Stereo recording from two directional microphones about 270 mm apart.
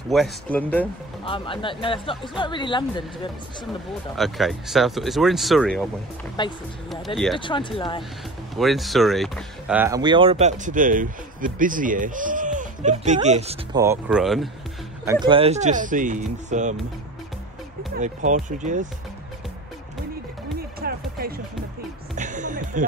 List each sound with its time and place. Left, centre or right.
0.1 s speech: centre
1.2 s speech: centre
4.2 s speech: centre
6.4 s speech: centre
8.5 s speech: centre; by 13.6 s right
13.7 s speech: centre
15.0 s speech: centre
17.9 s speech: right
20.8 s music: right